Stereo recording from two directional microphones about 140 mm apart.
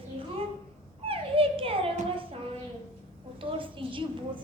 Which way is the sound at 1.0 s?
40° right (ahead or behind).